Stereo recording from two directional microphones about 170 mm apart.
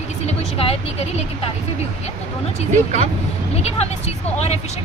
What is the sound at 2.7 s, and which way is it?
Speech, 45° right (ahead or behind).